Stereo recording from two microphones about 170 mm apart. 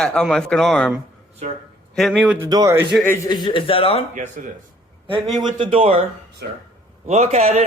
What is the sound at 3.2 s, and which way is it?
Speech, 25° left (ahead or behind).